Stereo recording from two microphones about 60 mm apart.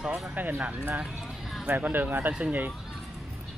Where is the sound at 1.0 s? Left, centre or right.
Centre.